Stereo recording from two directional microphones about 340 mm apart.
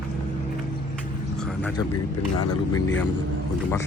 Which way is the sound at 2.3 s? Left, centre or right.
Left.